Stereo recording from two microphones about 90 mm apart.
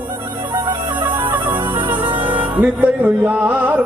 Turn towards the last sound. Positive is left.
turn(degrees=-15)  # may be behind; listen again after turning